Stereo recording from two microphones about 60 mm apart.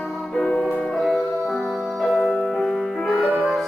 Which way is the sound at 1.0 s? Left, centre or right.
Centre.